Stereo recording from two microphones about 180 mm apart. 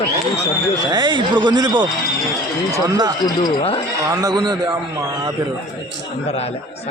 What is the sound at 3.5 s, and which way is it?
Speech, 30° left (ahead or behind).